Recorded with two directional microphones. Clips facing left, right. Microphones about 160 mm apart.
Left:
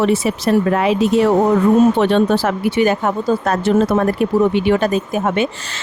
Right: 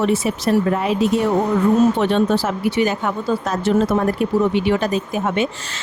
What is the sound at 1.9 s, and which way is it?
Speech, 70° left (ahead or behind).